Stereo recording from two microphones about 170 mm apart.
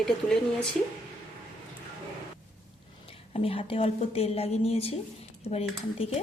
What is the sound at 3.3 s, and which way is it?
Speech, 35° left (ahead or behind).